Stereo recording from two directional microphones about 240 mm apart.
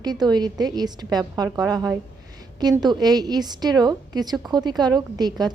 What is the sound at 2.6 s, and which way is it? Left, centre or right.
A woman's voice, centre.